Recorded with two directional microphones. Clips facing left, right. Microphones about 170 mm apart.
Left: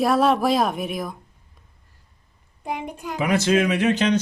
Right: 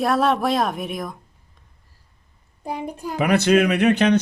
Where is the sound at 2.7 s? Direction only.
35° right (ahead or behind).